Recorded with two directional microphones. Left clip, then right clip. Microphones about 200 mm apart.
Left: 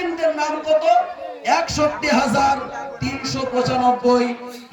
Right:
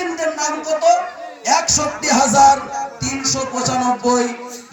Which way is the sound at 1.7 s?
45° right (ahead or behind).